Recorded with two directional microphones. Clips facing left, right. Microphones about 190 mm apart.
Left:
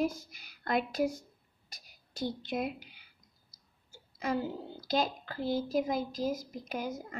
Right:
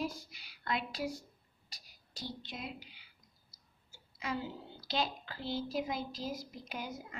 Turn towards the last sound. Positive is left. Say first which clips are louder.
# left 6 dB
turn(degrees=45)  # may be behind; listen again after turning